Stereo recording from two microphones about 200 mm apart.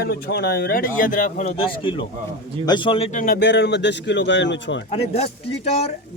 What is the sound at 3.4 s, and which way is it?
A man's voice, 60° left (ahead or behind).